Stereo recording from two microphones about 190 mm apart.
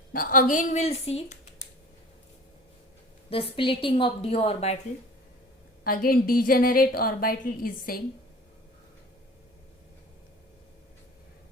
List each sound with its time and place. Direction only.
0.1 s speech: 45° left (ahead or behind)
3.5 s a woman's voice: 30° left (ahead or behind)
5.8 s a woman's voice: 50° left (ahead or behind)